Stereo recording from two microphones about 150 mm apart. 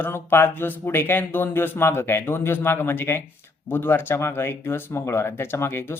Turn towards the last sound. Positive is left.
turn(degrees=15)  # may be behind; listen again after turning